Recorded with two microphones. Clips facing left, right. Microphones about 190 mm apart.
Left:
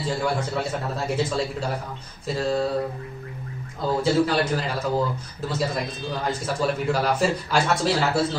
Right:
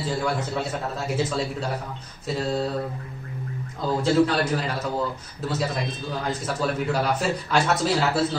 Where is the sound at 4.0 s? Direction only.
Centre (ahead or behind).